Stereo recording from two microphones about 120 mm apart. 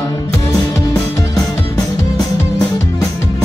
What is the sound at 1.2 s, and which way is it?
Music, 25° left (ahead or behind).